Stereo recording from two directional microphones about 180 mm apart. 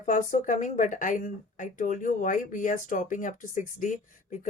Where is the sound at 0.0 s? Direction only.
45° left (ahead or behind).